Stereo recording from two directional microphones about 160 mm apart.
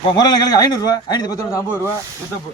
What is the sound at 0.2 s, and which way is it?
A man's voice, 25° left (ahead or behind).